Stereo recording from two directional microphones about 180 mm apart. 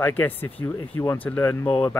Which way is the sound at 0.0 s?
10° left (ahead or behind).